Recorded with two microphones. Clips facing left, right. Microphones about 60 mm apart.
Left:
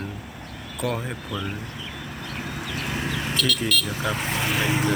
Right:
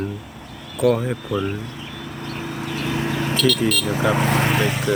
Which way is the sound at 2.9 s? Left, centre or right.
Right.